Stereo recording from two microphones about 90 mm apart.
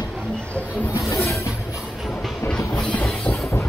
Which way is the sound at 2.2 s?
10° left (ahead or behind).